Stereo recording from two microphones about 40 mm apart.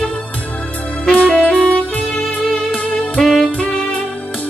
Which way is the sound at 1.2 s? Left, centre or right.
Left.